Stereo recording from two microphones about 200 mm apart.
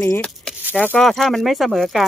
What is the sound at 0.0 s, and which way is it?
Speech, 5° left (ahead or behind).